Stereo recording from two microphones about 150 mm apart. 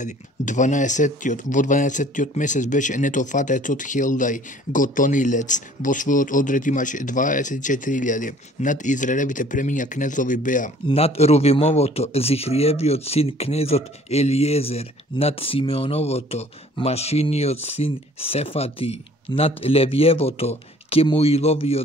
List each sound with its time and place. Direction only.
0.0 s speech: 55° left (ahead or behind)
10.9 s speech: 40° left (ahead or behind)